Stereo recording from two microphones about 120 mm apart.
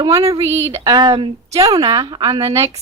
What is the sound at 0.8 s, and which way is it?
Speech, 35° right (ahead or behind).